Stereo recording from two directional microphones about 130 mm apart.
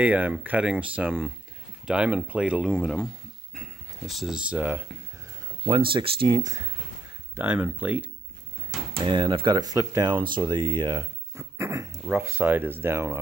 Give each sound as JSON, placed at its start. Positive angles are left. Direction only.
{"t": 0.0, "sound": "speech", "side_deg": -10}
{"t": 5.7, "sound": "speech", "side_deg": -40}
{"t": 7.3, "sound": "speech", "side_deg": -15}
{"t": 8.9, "sound": "speech", "side_deg": -35}
{"t": 11.3, "sound": "speech", "side_deg": -20}